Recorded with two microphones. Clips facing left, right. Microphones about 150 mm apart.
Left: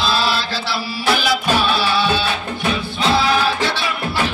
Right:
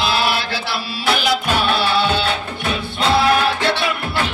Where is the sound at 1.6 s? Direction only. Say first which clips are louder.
Even; 55° right (ahead or behind).